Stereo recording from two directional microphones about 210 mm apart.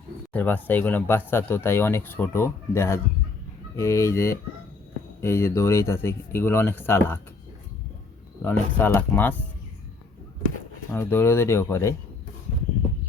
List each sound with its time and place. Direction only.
0.3 s speech: 10° left (ahead or behind)
8.4 s speech: 10° left (ahead or behind)
10.9 s speech: 10° left (ahead or behind)